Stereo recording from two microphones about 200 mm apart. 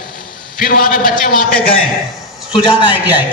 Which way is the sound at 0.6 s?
45° left (ahead or behind).